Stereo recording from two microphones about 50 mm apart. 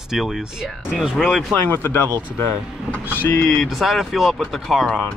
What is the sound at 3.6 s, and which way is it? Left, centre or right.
Speech, centre.